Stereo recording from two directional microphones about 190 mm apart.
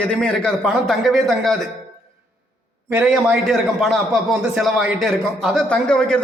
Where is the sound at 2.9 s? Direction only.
10° right (ahead or behind).